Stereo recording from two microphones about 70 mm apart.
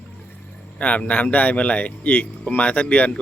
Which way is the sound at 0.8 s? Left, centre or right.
Centre.